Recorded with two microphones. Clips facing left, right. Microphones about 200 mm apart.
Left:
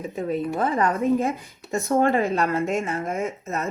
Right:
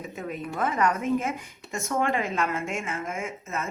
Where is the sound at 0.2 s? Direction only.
30° left (ahead or behind).